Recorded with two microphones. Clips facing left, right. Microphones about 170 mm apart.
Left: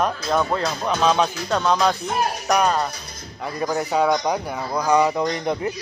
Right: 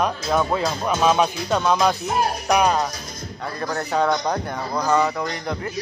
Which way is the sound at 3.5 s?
10° left (ahead or behind).